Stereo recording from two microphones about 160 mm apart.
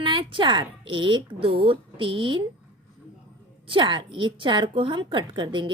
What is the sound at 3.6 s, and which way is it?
A woman's voice, 30° right (ahead or behind).